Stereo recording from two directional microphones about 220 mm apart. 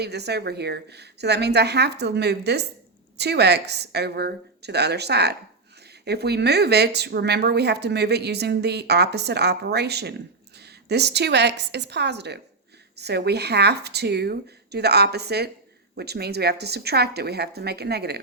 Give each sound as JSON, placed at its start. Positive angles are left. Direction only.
{"t": 0.0, "sound": "speech", "side_deg": -50}